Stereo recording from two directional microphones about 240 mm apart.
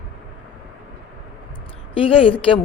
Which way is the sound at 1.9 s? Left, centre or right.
Left.